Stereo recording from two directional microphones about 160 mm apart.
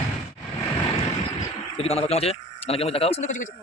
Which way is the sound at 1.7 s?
40° left (ahead or behind).